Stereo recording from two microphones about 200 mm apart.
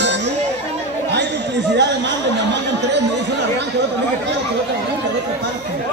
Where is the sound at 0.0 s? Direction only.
60° right (ahead or behind).